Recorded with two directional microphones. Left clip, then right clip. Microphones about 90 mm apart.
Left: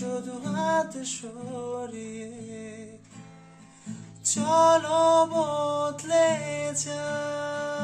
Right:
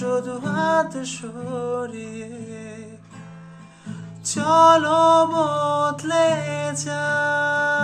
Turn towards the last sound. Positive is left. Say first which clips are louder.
# right 10 dB
turn(degrees=25)  # may be behind; listen again after turning